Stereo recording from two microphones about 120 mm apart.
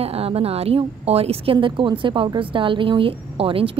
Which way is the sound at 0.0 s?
55° right (ahead or behind).